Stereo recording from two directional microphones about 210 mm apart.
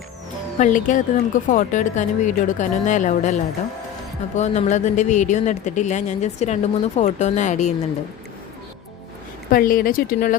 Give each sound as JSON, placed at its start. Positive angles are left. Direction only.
{"t": 0.6, "sound": "speech", "side_deg": 40}
{"t": 9.5, "sound": "speech", "side_deg": 40}